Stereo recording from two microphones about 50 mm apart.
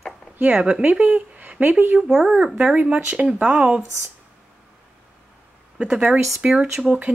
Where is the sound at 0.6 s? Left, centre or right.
Right.